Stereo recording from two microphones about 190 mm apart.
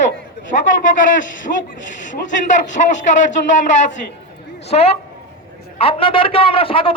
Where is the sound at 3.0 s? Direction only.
40° left (ahead or behind).